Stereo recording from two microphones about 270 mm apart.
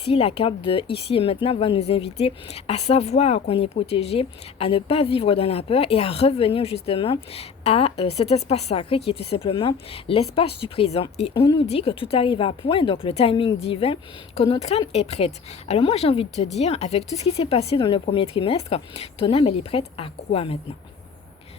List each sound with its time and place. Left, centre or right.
0.0 s a woman's voice: left